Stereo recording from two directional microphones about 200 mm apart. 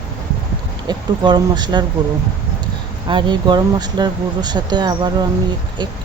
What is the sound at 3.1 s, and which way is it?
Speech, 25° right (ahead or behind).